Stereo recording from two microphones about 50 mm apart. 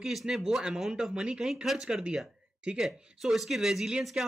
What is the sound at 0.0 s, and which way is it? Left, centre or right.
A man's voice, centre.